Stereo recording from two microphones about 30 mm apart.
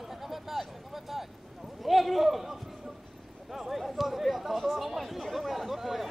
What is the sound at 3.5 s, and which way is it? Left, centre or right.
Chatter, centre.